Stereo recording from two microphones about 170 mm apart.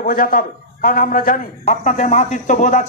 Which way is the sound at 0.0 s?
60° left (ahead or behind).